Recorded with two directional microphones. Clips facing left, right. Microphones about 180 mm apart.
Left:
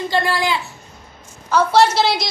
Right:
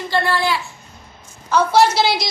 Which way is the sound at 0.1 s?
15° left (ahead or behind).